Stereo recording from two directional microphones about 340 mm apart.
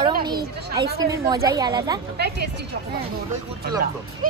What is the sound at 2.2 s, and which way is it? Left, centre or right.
Speech, right.